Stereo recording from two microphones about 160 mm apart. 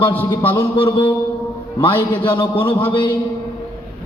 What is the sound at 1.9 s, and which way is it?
Speech, 15° left (ahead or behind).